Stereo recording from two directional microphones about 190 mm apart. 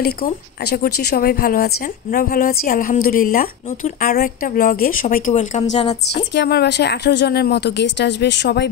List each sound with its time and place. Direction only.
0.0 s a woman's voice: 55° left (ahead or behind); by 5.9 s 35° left (ahead or behind)
6.1 s speech: 65° left (ahead or behind)